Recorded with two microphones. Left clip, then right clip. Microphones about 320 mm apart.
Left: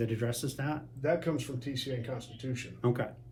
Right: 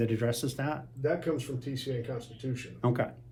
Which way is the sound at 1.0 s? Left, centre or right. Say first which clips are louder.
Even; left.